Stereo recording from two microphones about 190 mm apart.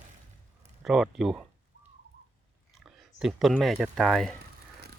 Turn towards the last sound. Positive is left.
turn(degrees=0)  # may be behind; listen again after turning